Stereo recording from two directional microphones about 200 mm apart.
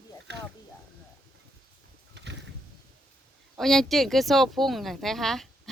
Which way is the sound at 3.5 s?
Centre (ahead or behind).